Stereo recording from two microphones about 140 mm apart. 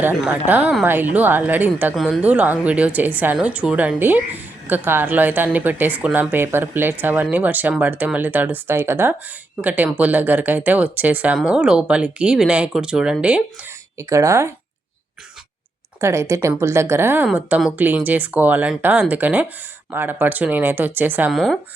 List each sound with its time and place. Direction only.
0.3 s a woman's voice: 10° right (ahead or behind)
14.0 s speech: 20° right (ahead or behind)
16.0 s a woman's voice: 20° right (ahead or behind)
21.3 s speech: centre (ahead or behind)